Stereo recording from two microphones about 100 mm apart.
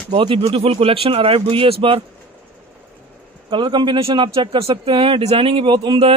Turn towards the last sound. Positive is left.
turn(degrees=-50)  # may be behind; listen again after turning